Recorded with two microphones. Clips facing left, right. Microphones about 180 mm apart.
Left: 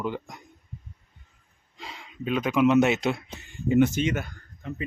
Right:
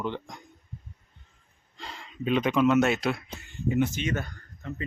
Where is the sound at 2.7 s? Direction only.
20° left (ahead or behind).